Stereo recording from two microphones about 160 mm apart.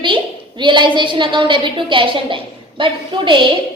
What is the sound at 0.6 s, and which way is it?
A woman's voice, 30° right (ahead or behind).